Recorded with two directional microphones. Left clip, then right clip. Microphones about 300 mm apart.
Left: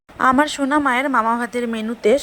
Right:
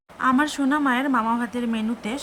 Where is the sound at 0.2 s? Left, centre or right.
Centre.